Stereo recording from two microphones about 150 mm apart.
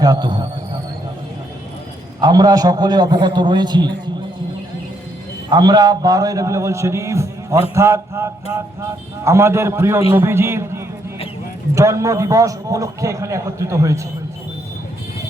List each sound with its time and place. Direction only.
0.0 s a man's voice: 25° right (ahead or behind)
2.2 s a man's voice: 25° right (ahead or behind)
5.5 s a man's voice: 30° right (ahead or behind)